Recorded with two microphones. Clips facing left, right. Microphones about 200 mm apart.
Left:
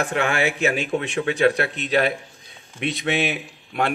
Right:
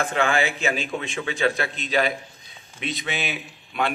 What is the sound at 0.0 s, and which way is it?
A man's voice, 65° left (ahead or behind).